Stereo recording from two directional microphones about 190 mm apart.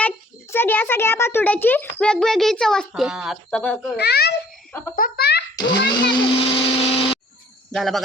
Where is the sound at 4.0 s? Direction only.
60° left (ahead or behind).